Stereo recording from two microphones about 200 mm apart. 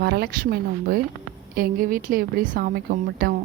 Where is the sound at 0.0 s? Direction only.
55° right (ahead or behind).